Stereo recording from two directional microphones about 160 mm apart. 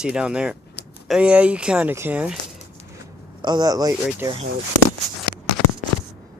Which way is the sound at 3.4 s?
25° right (ahead or behind).